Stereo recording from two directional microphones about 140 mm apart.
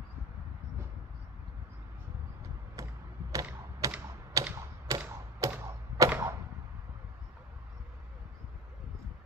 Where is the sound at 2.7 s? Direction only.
25° right (ahead or behind).